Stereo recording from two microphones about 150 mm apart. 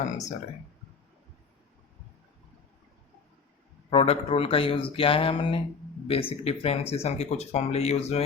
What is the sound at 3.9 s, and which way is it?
Speech, 40° left (ahead or behind).